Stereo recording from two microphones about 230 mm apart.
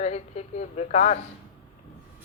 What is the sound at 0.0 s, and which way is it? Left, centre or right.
A woman's voice, left.